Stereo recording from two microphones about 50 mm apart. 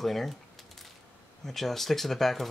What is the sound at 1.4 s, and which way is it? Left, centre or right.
Speech, centre.